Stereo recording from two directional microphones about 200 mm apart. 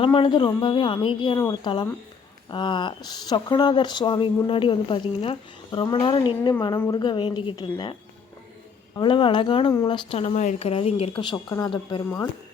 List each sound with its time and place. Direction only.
0.0 s speech: 25° left (ahead or behind)
9.0 s speech: 25° left (ahead or behind)